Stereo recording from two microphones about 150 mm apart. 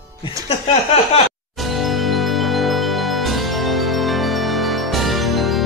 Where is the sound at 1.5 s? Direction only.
Centre (ahead or behind).